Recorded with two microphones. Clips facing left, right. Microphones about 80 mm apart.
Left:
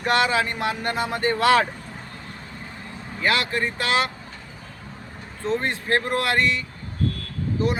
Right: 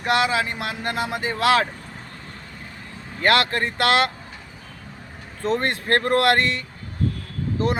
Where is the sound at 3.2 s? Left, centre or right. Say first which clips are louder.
Right 3 dB; right.